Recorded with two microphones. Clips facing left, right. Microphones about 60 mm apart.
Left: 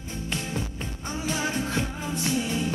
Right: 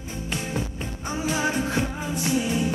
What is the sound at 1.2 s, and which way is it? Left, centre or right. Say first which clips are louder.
Music: right 3 dB; centre.